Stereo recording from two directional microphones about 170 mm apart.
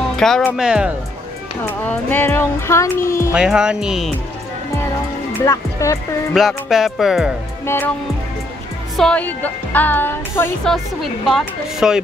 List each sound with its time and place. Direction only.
0.2 s speech: 5° left (ahead or behind)
0.6 s speech: 5° right (ahead or behind)
1.6 s speech: 10° left (ahead or behind)
3.3 s speech: 5° right (ahead or behind)
5.4 s speech: 20° left (ahead or behind)
6.3 s speech: centre (ahead or behind)
7.6 s speech: 15° left (ahead or behind)
8.9 s speech: 5° left (ahead or behind)
10.7 s speech: centre (ahead or behind)